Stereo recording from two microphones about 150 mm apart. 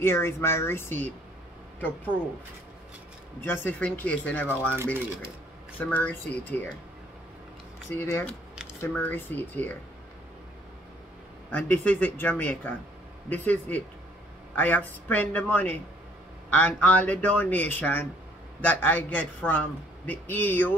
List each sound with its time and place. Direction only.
0.0 s a man's voice: 15° left (ahead or behind)
3.4 s a man's voice: 15° left (ahead or behind)
5.8 s a man's voice: 10° left (ahead or behind)
7.9 s a man's voice: 15° left (ahead or behind)
11.5 s a man's voice: 10° left (ahead or behind)